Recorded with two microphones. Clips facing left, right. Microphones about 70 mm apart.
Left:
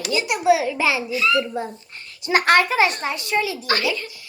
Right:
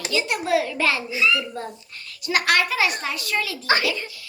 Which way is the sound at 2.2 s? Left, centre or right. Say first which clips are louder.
Left 4 dB; left.